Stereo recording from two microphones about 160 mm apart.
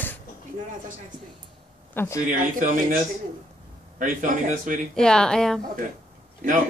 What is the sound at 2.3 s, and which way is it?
Speech, 60° right (ahead or behind).